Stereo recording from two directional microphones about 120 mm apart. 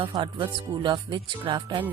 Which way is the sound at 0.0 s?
45° right (ahead or behind).